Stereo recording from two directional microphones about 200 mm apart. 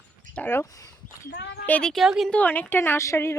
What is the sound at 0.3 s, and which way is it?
Speech, 10° left (ahead or behind).